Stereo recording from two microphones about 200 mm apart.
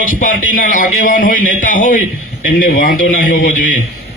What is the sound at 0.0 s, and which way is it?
A man's voice, 45° left (ahead or behind).